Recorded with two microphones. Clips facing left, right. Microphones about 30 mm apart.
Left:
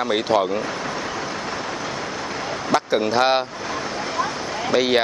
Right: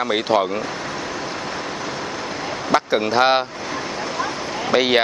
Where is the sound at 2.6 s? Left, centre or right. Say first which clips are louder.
Right 1 dB; centre.